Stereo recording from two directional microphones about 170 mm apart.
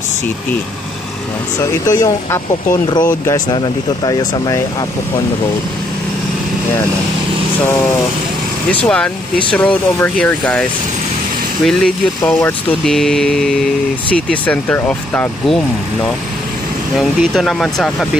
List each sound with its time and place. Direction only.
1.9 s speech: 20° left (ahead or behind)
8.8 s speech: 5° left (ahead or behind)
11.6 s speech: 5° left (ahead or behind)
17.2 s speech: centre (ahead or behind)